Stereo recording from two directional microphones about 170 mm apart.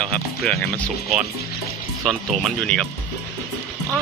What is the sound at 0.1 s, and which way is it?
Speech, 5° left (ahead or behind).